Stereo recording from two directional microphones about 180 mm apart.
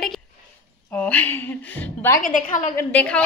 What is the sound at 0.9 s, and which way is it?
Speech, 10° left (ahead or behind).